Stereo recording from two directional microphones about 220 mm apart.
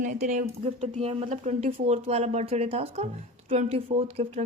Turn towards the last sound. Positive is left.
turn(degrees=-25)  # may be behind; listen again after turning